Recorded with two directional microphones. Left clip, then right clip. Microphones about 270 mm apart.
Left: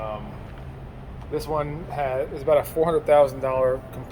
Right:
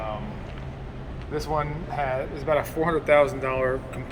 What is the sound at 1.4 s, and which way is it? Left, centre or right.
Speech, left.